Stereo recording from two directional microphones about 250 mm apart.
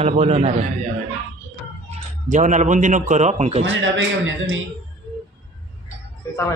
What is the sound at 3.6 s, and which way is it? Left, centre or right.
Speech, right.